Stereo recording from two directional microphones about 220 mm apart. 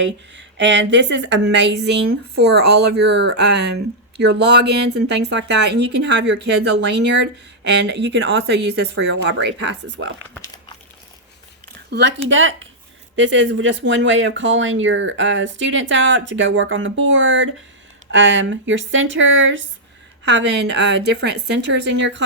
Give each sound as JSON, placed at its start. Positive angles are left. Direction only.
{"t": 0.0, "sound": "speech", "side_deg": -55}
{"t": 9.8, "sound": "speech", "side_deg": -65}
{"t": 10.3, "sound": "crumpling", "side_deg": 15}
{"t": 11.9, "sound": "speech", "side_deg": -55}